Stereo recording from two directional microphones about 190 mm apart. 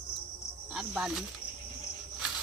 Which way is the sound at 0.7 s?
5° right (ahead or behind).